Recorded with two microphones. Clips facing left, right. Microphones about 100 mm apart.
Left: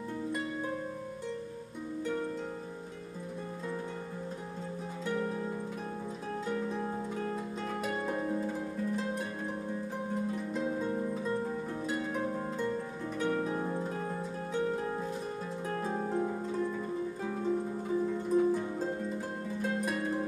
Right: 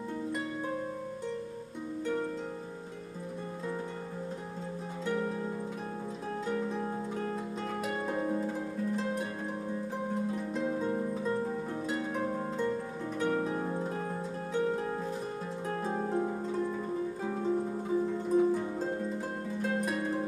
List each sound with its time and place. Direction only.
5.0 s music: 10° right (ahead or behind)
6.4 s harp: 10° right (ahead or behind)
8.1 s harp: 20° right (ahead or behind)
8.4 s harp: 5° right (ahead or behind)
10.3 s harp: centre (ahead or behind)
10.8 s music: 15° right (ahead or behind)
12.3 s harp: 25° right (ahead or behind)
13.2 s harp: 5° right (ahead or behind)
16.6 s music: 15° right (ahead or behind)
18.5 s harp: 5° right (ahead or behind)